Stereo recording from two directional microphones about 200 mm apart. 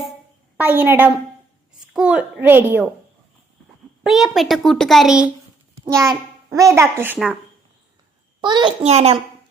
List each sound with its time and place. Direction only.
0.6 s a child's voice: 10° right (ahead or behind)
4.0 s a child's voice: centre (ahead or behind)
5.8 s a child's voice: 15° right (ahead or behind)
8.4 s a child's voice: 20° right (ahead or behind)